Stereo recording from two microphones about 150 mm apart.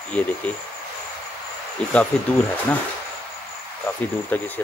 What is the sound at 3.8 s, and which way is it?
Speech, 10° left (ahead or behind).